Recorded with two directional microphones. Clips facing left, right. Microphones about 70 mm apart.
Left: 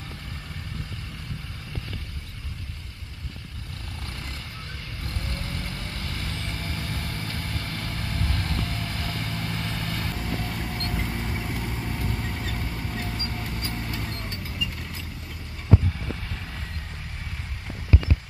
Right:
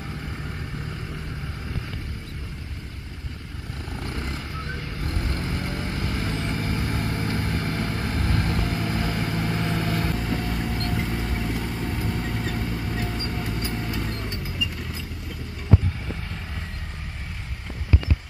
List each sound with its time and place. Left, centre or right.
4.0 s vehicle: right; by 14.4 s centre